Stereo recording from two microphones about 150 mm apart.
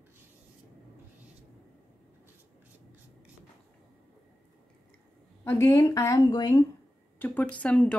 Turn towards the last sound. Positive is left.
turn(degrees=10)  # may be behind; listen again after turning